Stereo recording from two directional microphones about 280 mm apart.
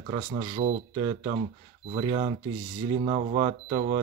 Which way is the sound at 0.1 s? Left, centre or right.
Centre.